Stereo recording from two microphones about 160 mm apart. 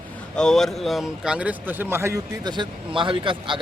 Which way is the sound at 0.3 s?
5° left (ahead or behind).